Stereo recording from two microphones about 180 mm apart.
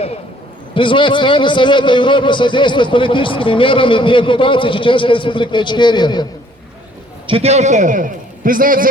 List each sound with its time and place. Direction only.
0.7 s a man's voice: 25° left (ahead or behind)
7.3 s a man's voice: 35° right (ahead or behind); by 8.9 s 50° right (ahead or behind)